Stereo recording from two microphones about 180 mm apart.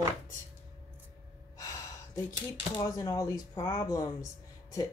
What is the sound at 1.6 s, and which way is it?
Speech, 20° left (ahead or behind).